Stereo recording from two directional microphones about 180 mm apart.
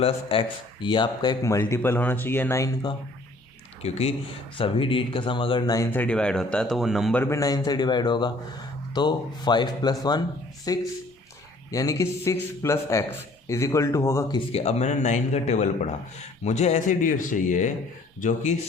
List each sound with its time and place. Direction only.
0.0 s a man's voice: 30° left (ahead or behind); by 2.6 s 15° left (ahead or behind)
3.8 s a man's voice: 35° left (ahead or behind); by 7.2 s centre (ahead or behind)
7.2 s a man's voice: 15° left (ahead or behind)
14.5 s speech: 35° left (ahead or behind)